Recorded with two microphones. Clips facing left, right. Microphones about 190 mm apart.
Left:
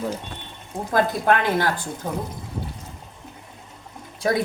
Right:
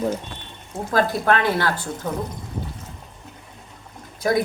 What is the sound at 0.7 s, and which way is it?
Speech, 20° left (ahead or behind).